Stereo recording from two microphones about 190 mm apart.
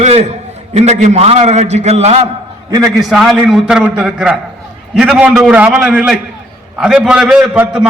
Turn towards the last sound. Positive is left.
turn(degrees=-5)  # may be behind; listen again after turning